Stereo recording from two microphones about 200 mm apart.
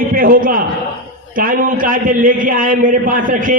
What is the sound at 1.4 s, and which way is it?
A man's voice, 45° right (ahead or behind).